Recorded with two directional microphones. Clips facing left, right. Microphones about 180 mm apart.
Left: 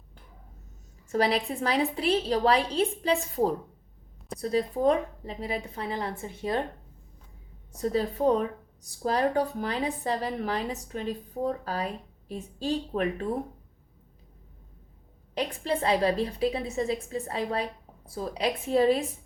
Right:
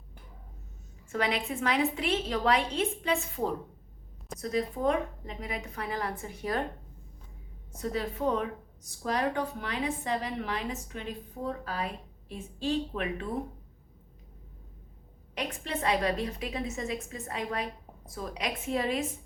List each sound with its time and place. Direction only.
1.1 s a woman's voice: 35° left (ahead or behind)
7.7 s a woman's voice: 35° left (ahead or behind)
15.4 s a woman's voice: 35° left (ahead or behind)